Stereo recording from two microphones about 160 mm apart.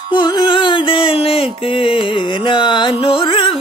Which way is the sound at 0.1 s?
30° left (ahead or behind).